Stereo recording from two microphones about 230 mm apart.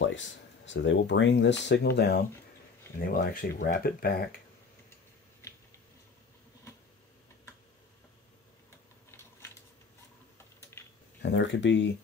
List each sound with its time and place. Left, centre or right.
0.0 s speech: left
10.8 s a sound: centre
11.2 s speech: left